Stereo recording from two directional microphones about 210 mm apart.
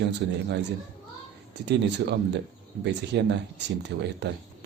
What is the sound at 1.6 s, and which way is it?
Speech, 55° right (ahead or behind).